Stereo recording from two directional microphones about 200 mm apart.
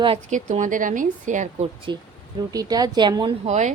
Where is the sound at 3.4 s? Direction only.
35° right (ahead or behind).